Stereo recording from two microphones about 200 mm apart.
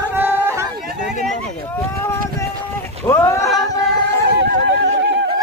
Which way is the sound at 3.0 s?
15° left (ahead or behind).